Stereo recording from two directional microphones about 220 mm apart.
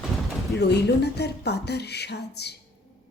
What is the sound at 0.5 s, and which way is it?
Speech, 50° left (ahead or behind).